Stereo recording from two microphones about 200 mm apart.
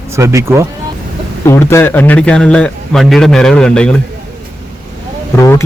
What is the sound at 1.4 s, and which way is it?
A man's voice, 15° left (ahead or behind).